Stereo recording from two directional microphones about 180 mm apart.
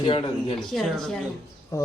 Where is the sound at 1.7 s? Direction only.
15° left (ahead or behind).